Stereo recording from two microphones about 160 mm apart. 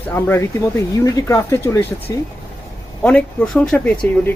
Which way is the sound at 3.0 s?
10° left (ahead or behind).